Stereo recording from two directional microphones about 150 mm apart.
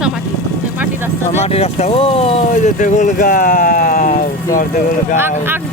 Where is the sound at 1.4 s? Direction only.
45° left (ahead or behind); by 4.6 s 65° left (ahead or behind).